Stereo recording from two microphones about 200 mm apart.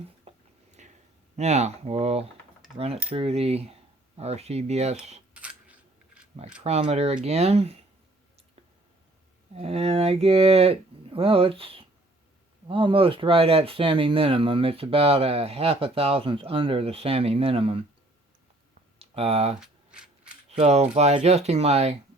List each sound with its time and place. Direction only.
0.3 s a sound: 35° right (ahead or behind)
1.4 s speech: 35° right (ahead or behind)
5.3 s coin: 5° right (ahead or behind)
6.6 s speech: 30° right (ahead or behind)
9.6 s speech: 30° right (ahead or behind)
18.9 s speech: 30° right (ahead or behind)
19.5 s a sound: 5° right (ahead or behind)
20.5 s speech: 30° right (ahead or behind)